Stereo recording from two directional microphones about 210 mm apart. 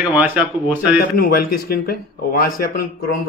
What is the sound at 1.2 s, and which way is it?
A man's voice, 45° left (ahead or behind).